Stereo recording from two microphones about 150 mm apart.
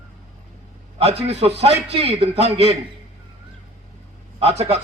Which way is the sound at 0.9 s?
45° right (ahead or behind).